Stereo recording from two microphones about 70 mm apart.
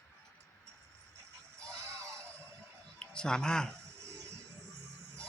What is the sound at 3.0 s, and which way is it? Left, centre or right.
Speech, centre.